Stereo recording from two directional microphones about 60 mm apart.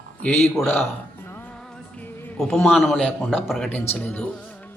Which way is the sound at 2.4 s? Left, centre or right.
Left.